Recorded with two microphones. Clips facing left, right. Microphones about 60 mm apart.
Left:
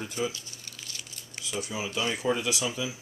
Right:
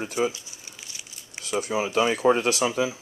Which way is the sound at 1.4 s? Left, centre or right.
Right.